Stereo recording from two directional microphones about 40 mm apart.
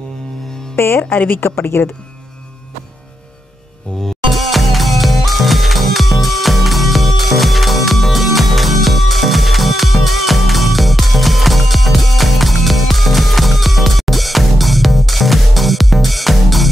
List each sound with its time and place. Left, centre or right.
0.7 s speech: left
1.1 s speech: left
1.4 s a woman's voice: left
4.0 s music: centre